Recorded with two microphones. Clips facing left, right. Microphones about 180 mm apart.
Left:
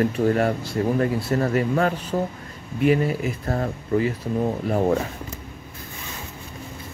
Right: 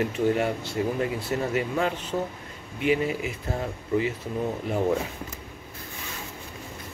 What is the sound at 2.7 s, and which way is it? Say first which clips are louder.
Speech: left 5 dB; 40° left (ahead or behind).